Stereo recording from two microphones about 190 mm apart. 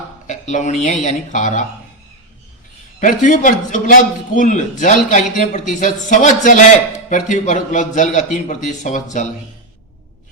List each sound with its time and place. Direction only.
0.3 s a man's voice: 40° left (ahead or behind)
3.0 s a man's voice: 40° left (ahead or behind)